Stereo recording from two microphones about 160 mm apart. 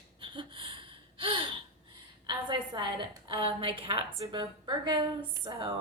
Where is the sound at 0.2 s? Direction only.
30° right (ahead or behind).